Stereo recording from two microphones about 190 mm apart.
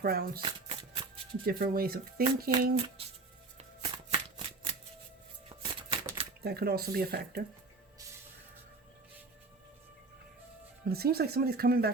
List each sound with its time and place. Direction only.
0.0 s speech: 55° right (ahead or behind)
0.4 s shuffling cards: 30° right (ahead or behind)
1.5 s speech: 50° right (ahead or behind)
3.6 s shuffling cards: 30° right (ahead or behind)
5.5 s typewriter: 30° right (ahead or behind)
6.4 s speech: 55° right (ahead or behind)
10.8 s speech: 55° right (ahead or behind)